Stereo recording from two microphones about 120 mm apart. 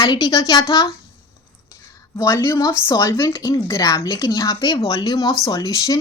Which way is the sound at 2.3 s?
25° left (ahead or behind).